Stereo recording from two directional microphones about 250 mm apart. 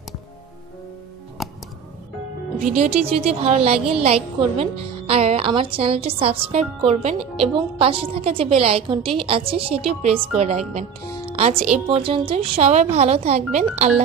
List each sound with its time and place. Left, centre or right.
1.4 s music: centre
2.8 s a woman's voice: right
11.2 s music: right
11.9 s a woman's voice: right